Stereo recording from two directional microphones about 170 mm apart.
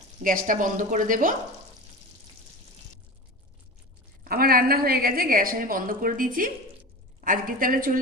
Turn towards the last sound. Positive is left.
turn(degrees=-55)  # may be behind; listen again after turning